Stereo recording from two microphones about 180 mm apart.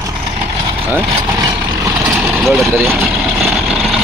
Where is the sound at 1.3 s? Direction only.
20° right (ahead or behind).